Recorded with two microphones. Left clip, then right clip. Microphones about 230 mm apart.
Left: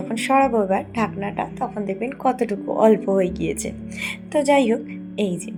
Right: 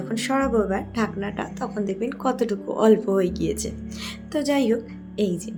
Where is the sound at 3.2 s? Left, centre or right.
Right.